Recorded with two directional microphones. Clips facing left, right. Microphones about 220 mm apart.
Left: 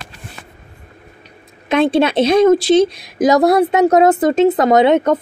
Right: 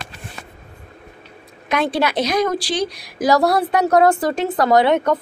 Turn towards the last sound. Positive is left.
turn(degrees=20)  # may be behind; listen again after turning